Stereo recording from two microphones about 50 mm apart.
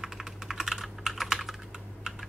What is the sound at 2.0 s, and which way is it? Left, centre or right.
Typing, centre.